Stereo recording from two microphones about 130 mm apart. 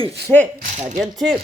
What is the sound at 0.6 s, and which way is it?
Speech, 70° right (ahead or behind).